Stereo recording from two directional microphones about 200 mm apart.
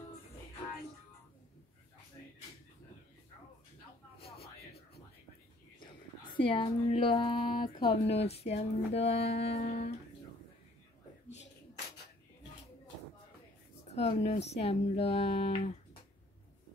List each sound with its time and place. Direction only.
5.8 s a woman's voice: 25° left (ahead or behind)
13.8 s speech: 30° left (ahead or behind)